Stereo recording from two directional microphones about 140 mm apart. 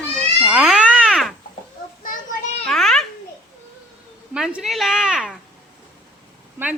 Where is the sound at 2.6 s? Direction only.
5° left (ahead or behind).